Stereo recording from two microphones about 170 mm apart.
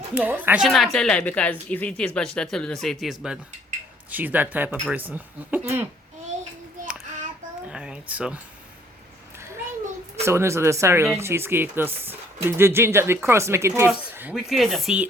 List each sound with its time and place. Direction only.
0.1 s a woman's voice: 10° right (ahead or behind)
7.7 s a child's voice: 5° right (ahead or behind)
10.2 s speech: 15° right (ahead or behind)